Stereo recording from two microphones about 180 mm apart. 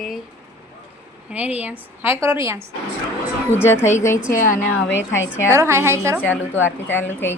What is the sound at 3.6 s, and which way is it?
Speech, 15° left (ahead or behind).